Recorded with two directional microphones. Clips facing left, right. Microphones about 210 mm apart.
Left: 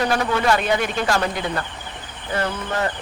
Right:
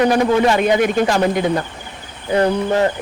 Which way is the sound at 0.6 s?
50° right (ahead or behind).